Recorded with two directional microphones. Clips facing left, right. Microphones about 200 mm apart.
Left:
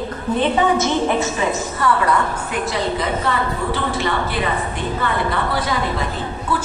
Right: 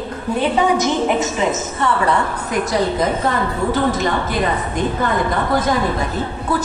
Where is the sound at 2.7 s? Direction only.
45° right (ahead or behind).